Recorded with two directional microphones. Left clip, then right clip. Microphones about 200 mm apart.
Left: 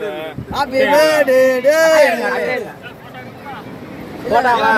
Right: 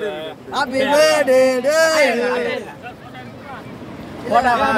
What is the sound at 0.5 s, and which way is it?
Speech, 40° right (ahead or behind).